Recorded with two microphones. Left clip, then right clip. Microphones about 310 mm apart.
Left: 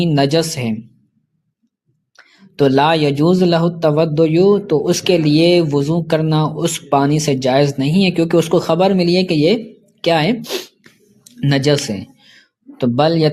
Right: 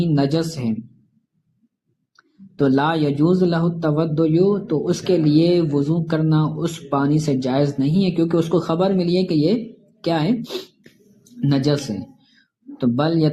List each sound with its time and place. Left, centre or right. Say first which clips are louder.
0.0 s speech: left 6 dB; left
2.1 s speech: left 6 dB; left